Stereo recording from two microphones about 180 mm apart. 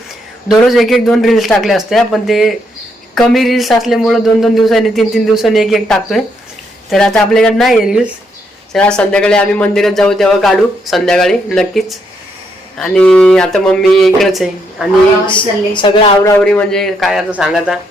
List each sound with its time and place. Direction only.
0.4 s speech: centre (ahead or behind)
15.3 s a woman's voice: 25° left (ahead or behind)
16.4 s speech: 5° left (ahead or behind)